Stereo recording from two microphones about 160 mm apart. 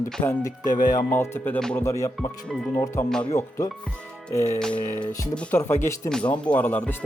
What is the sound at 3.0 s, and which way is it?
Speech, 5° left (ahead or behind).